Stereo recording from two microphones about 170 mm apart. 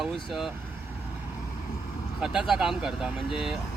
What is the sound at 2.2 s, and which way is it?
Speech, 5° right (ahead or behind).